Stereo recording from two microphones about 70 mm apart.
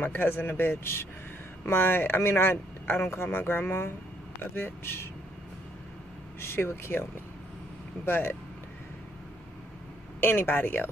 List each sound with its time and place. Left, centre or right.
0.0 s speech: left
6.4 s speech: left
10.2 s speech: left